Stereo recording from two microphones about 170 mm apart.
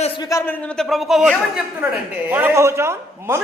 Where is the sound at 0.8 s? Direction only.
Centre (ahead or behind).